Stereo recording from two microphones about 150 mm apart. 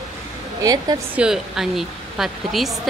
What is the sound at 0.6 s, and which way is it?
Speech, 25° right (ahead or behind).